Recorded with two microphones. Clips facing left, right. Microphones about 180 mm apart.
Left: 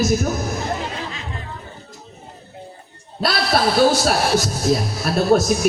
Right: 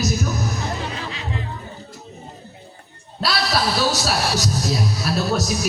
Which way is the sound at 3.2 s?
50° left (ahead or behind).